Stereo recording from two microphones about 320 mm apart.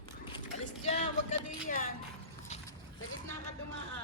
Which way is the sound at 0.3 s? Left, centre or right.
Left.